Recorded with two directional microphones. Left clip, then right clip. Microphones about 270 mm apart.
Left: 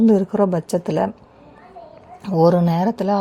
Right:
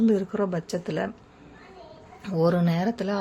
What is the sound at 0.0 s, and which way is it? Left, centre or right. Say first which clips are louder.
A woman's voice: left 8 dB; centre.